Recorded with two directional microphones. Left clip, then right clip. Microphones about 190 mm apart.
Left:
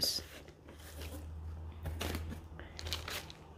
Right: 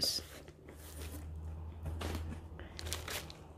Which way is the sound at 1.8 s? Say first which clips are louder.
Left 3 dB; 40° left (ahead or behind).